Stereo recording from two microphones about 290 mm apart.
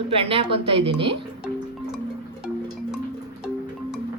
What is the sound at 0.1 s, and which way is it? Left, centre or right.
Speech, centre.